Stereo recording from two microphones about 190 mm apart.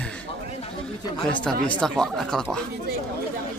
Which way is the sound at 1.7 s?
5° left (ahead or behind).